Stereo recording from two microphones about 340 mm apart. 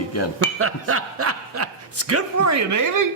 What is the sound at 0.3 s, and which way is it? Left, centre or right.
Speech, right.